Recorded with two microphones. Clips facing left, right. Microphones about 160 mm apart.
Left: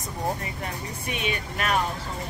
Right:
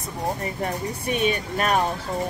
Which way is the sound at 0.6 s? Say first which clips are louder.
Right 7 dB; 40° right (ahead or behind).